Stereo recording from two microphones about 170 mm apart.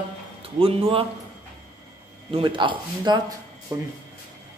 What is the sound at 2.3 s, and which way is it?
Speech, 30° right (ahead or behind).